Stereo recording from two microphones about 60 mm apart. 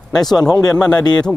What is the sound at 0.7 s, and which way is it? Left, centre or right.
Speech, centre.